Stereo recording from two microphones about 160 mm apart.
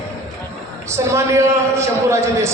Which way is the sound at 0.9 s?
15° right (ahead or behind).